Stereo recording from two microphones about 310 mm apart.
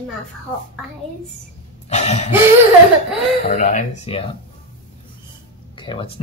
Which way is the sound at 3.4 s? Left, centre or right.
Left.